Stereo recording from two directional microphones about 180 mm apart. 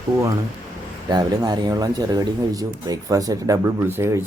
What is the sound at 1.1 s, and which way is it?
Speech, 20° right (ahead or behind).